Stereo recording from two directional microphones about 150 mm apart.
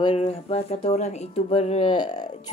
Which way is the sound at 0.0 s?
40° left (ahead or behind).